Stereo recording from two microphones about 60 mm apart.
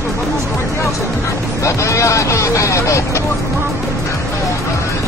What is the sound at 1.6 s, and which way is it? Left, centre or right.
Speech, left.